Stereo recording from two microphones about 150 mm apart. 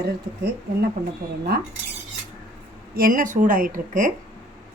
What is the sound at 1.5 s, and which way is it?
Speech, 90° right.